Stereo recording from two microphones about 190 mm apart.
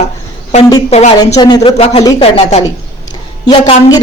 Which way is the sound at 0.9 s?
35° left (ahead or behind).